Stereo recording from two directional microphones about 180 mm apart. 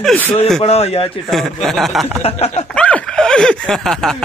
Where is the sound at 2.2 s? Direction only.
35° left (ahead or behind).